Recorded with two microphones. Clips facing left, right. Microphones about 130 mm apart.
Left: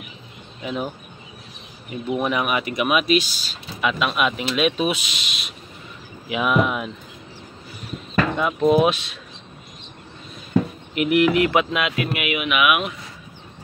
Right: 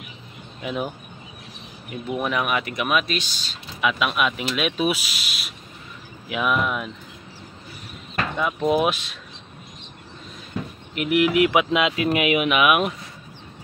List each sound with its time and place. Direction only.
0.6 s speech: 5° right (ahead or behind)
8.4 s speech: centre (ahead or behind)
11.0 s speech: centre (ahead or behind)
11.3 s music: 10° right (ahead or behind)
11.7 s speech: 25° right (ahead or behind)
12.1 s speech: 35° right (ahead or behind)